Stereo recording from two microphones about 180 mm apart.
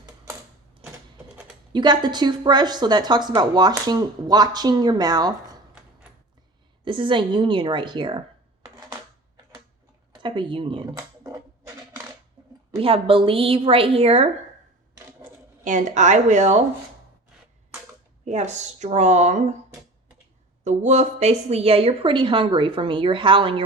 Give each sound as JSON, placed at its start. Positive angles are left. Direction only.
{"t": 1.7, "sound": "speech", "side_deg": -25}
{"t": 6.8, "sound": "speech", "side_deg": -25}
{"t": 10.1, "sound": "a sound", "side_deg": -25}
{"t": 12.7, "sound": "a woman's voice", "side_deg": -30}
{"t": 15.6, "sound": "a woman's voice", "side_deg": -45}
{"t": 18.3, "sound": "a woman's voice", "side_deg": -40}
{"t": 20.7, "sound": "speech", "side_deg": -40}